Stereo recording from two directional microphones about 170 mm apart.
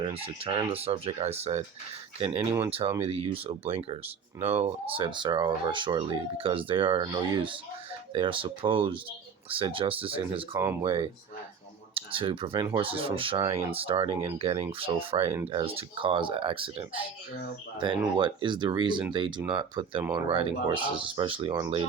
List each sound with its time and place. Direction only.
0.0 s speech: 35° right (ahead or behind)
10.5 s speech: 15° right (ahead or behind)
10.8 s speech: 30° right (ahead or behind)